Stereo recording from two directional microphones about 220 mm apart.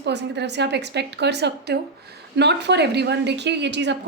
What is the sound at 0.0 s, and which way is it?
A woman's voice, 50° right (ahead or behind).